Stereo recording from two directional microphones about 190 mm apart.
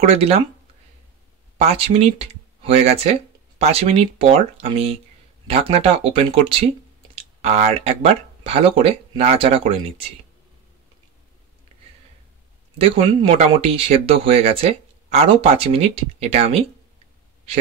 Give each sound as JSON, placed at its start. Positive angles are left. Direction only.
{"t": 0.0, "sound": "speech", "side_deg": -30}
{"t": 1.6, "sound": "speech", "side_deg": -35}
{"t": 12.7, "sound": "speech", "side_deg": -30}